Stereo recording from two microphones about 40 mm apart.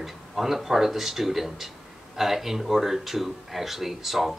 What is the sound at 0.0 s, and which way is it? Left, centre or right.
Speech, centre.